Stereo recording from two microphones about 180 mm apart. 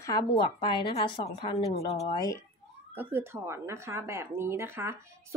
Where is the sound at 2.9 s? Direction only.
10° right (ahead or behind).